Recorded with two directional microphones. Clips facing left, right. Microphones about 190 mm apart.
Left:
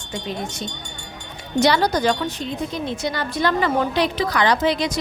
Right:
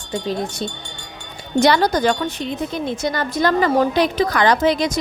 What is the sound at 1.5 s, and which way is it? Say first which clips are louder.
A woman's voice: right 2 dB; 50° right (ahead or behind).